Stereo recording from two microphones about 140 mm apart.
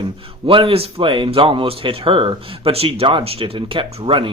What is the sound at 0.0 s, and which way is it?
Speech, 40° right (ahead or behind).